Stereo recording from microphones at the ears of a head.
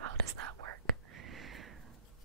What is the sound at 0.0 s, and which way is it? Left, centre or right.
Whispering, right.